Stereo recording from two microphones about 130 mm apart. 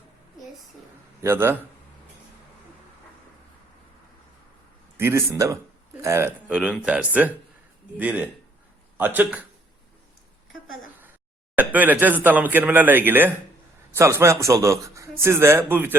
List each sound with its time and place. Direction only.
1.2 s speech: 20° right (ahead or behind)
4.9 s a man's voice: 20° right (ahead or behind)
6.5 s speech: 10° right (ahead or behind)
11.5 s a man's voice: 15° right (ahead or behind)